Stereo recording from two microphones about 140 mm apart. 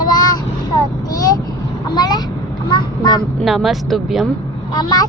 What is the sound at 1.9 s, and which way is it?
Child singing, 30° left (ahead or behind).